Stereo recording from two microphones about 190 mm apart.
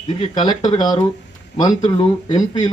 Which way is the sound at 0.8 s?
25° left (ahead or behind).